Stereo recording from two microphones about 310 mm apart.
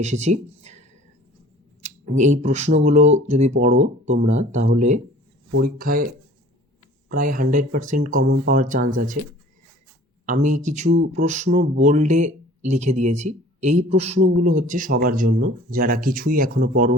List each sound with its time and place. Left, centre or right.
0.0 s speech: right
7.1 s speech: right
10.2 s speech: right